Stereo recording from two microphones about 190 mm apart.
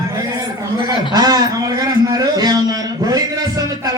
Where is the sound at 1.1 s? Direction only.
20° right (ahead or behind).